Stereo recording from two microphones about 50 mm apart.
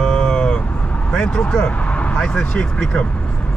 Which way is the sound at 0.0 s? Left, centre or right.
Centre.